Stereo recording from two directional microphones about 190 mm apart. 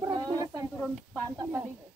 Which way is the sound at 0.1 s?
20° right (ahead or behind).